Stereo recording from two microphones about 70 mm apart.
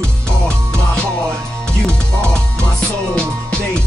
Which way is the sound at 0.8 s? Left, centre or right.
Centre.